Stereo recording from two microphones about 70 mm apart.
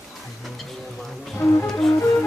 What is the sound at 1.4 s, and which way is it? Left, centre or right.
Music, left.